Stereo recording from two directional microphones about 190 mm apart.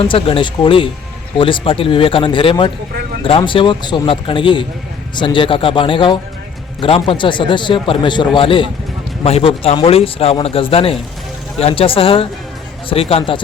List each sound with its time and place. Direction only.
0.0 s a man's voice: 30° left (ahead or behind)